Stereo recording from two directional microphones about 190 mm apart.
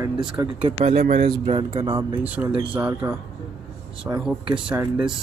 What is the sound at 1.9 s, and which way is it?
Speech, 10° right (ahead or behind).